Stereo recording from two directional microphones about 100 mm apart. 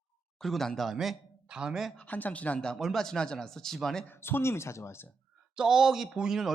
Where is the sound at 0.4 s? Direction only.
5° left (ahead or behind).